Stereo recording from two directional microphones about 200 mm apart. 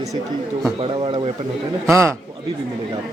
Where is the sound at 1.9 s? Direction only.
15° right (ahead or behind).